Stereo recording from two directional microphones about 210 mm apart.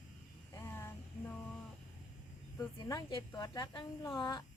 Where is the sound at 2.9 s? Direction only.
20° left (ahead or behind).